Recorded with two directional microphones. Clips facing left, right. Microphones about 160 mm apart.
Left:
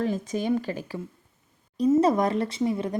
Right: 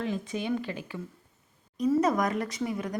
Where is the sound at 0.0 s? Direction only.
40° left (ahead or behind).